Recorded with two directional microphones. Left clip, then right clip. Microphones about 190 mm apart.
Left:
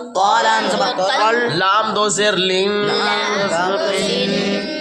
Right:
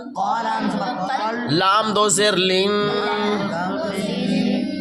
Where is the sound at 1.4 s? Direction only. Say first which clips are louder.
Left 2 dB; 50° right (ahead or behind).